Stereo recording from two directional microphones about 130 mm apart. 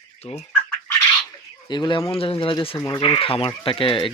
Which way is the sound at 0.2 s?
50° left (ahead or behind).